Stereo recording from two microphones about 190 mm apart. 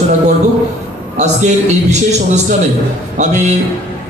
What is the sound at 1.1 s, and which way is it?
A man's voice, 35° right (ahead or behind).